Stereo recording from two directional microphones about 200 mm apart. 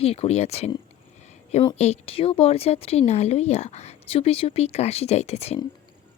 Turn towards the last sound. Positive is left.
turn(degrees=30)  # may be behind; listen again after turning